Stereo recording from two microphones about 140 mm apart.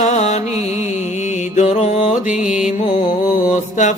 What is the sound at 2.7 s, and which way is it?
Mantra, 55° left (ahead or behind).